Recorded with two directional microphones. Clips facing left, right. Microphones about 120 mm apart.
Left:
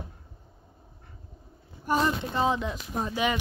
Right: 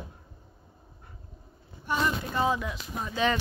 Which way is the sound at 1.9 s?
45° left (ahead or behind).